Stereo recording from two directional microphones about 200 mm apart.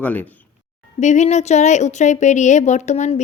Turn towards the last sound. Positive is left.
turn(degrees=35)  # may be behind; listen again after turning